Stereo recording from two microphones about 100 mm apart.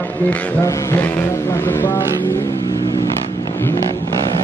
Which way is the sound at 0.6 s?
30° left (ahead or behind).